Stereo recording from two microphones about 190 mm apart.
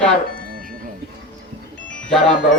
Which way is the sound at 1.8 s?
5° left (ahead or behind).